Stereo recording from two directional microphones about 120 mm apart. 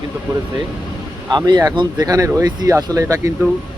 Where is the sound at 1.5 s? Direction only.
35° right (ahead or behind).